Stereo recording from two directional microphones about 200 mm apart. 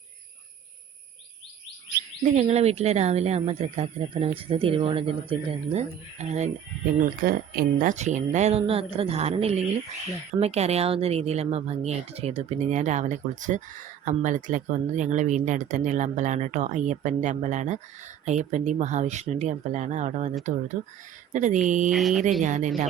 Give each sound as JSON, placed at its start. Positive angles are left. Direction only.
{"t": 2.4, "sound": "speech", "side_deg": -35}
{"t": 7.0, "sound": "speech", "side_deg": -45}
{"t": 21.8, "sound": "speech", "side_deg": 0}
{"t": 22.4, "sound": "speech", "side_deg": -40}